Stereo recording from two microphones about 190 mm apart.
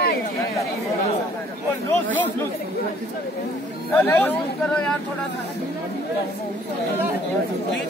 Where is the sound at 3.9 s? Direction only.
10° left (ahead or behind).